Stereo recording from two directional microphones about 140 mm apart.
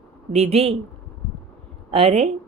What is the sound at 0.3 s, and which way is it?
Speech, 50° right (ahead or behind).